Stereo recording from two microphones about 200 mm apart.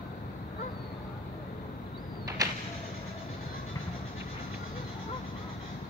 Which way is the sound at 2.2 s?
15° right (ahead or behind).